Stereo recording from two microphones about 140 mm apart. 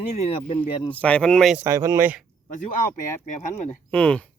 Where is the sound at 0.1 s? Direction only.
45° left (ahead or behind).